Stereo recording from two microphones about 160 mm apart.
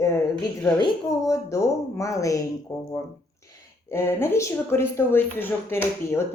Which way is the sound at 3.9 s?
15° left (ahead or behind).